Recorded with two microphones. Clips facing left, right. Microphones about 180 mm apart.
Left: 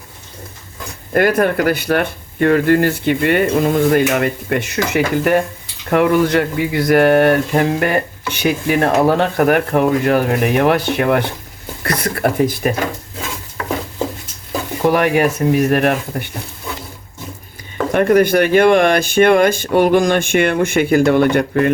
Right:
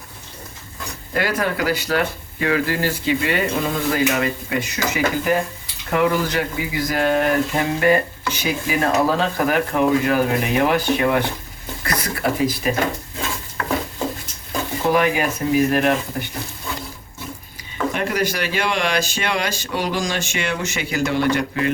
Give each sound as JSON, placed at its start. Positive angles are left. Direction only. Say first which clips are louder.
{"t": 1.1, "sound": "speech", "louder": "left 8 dB", "side_deg": 50}
{"t": 14.9, "sound": "speech", "louder": "left 4 dB", "side_deg": 65}
{"t": 17.9, "sound": "speech", "louder": "left 13 dB", "side_deg": 55}